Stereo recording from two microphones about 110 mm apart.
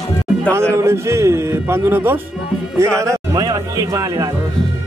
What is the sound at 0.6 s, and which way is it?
A man's voice, 25° right (ahead or behind).